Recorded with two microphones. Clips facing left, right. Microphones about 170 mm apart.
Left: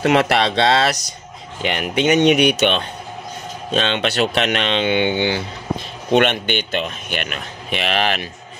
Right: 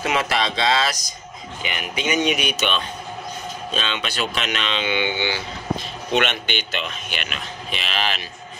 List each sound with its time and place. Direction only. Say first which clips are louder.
0.0 s speech: left 7 dB; 65° left (ahead or behind)